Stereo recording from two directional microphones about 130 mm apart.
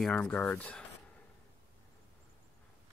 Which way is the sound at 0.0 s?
10° left (ahead or behind).